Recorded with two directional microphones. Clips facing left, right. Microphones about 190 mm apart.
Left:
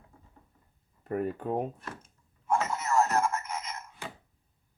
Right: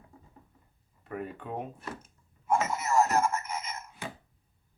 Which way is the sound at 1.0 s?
40° left (ahead or behind).